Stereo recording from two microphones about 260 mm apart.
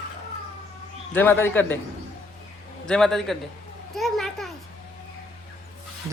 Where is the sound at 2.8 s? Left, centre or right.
Centre.